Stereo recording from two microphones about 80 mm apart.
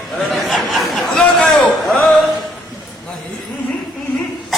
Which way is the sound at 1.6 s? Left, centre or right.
Centre.